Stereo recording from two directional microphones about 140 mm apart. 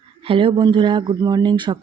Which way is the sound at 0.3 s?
35° right (ahead or behind).